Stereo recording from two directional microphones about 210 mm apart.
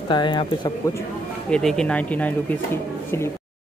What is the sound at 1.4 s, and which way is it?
Speech, 5° left (ahead or behind).